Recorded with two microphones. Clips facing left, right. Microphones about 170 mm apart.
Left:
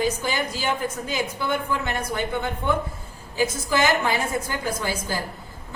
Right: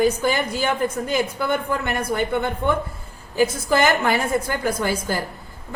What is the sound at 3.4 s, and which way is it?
A woman's voice, 55° right (ahead or behind).